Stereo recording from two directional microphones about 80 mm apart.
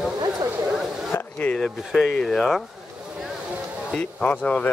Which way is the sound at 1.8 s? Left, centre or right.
Centre.